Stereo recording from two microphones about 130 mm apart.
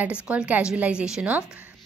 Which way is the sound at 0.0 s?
10° right (ahead or behind).